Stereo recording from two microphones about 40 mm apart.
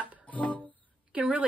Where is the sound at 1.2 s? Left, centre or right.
Right.